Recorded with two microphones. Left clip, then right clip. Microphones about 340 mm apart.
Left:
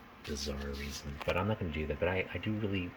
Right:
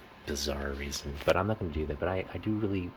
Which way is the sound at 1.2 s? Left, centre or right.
Centre.